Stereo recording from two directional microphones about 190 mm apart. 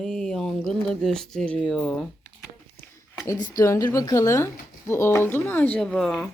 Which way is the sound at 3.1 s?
15° left (ahead or behind).